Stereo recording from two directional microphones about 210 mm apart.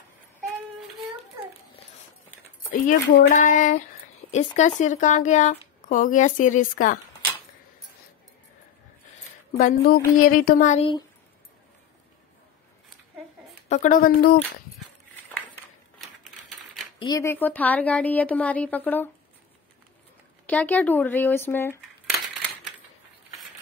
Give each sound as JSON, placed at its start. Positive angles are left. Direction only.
{"t": 2.7, "sound": "speech", "side_deg": 40}
{"t": 9.6, "sound": "speech", "side_deg": 40}
{"t": 13.7, "sound": "speech", "side_deg": 35}
{"t": 17.0, "sound": "speech", "side_deg": 15}
{"t": 20.4, "sound": "speech", "side_deg": 5}